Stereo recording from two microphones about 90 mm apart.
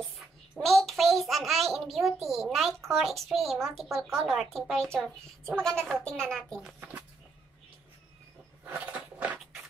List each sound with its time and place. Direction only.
0.6 s a child's voice: centre (ahead or behind)
8.7 s crunch: 15° right (ahead or behind)